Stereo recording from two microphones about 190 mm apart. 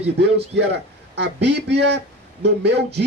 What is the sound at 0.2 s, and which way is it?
Speech, 65° right (ahead or behind).